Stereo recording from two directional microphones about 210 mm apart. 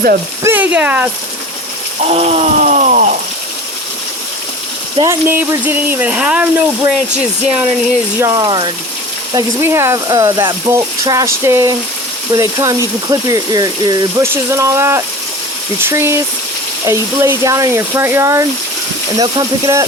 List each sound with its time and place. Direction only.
0.4 s speech: 10° right (ahead or behind)
2.0 s ratchet: 30° right (ahead or behind)
4.9 s speech: 10° right (ahead or behind)
8.2 s speech: 15° right (ahead or behind)